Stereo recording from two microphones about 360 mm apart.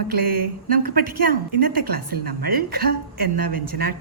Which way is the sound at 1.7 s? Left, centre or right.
Right.